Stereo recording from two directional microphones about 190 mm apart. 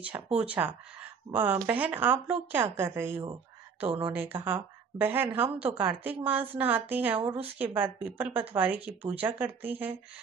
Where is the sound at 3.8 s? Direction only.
30° right (ahead or behind).